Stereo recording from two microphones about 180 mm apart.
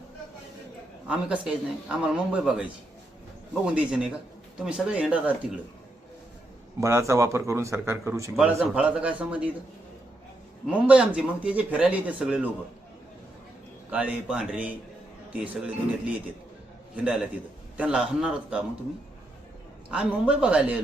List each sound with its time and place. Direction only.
1.0 s speech: 5° right (ahead or behind)
3.7 s a man's voice: 5° right (ahead or behind)
6.7 s a man's voice: 15° right (ahead or behind)
10.8 s a man's voice: 5° right (ahead or behind)
13.9 s a man's voice: 5° right (ahead or behind)
19.9 s speech: 5° right (ahead or behind)